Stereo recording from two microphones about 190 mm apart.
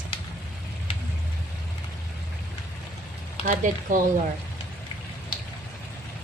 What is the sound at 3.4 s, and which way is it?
Speech, 45° right (ahead or behind).